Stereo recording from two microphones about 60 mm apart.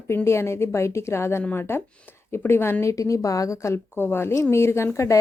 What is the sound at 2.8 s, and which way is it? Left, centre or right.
Speech, left.